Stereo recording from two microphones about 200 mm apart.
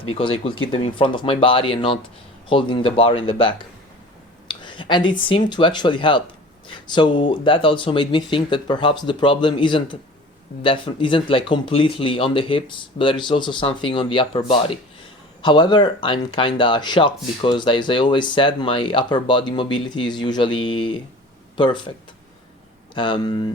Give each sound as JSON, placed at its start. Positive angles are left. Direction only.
{"t": 0.1, "sound": "speech", "side_deg": 25}
{"t": 4.4, "sound": "a sound", "side_deg": 25}
{"t": 5.5, "sound": "speech", "side_deg": 20}
{"t": 23.0, "sound": "speech", "side_deg": 25}